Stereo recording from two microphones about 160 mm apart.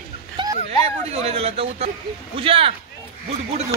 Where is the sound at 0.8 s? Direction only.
40° right (ahead or behind).